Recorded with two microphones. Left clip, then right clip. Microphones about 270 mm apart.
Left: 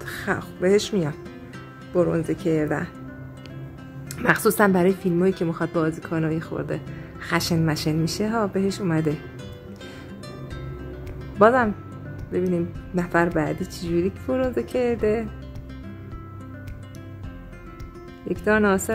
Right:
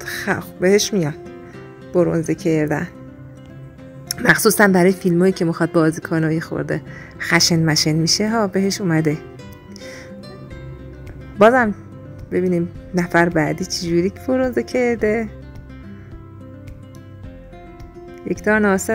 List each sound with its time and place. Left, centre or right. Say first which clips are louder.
0.0 s speech: right 5 dB; right
4.2 s speech: right 5 dB; right
11.3 s speech: right 4 dB; right
18.3 s speech: right 3 dB; centre